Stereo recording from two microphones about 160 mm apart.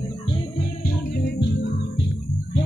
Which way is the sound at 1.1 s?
85° left.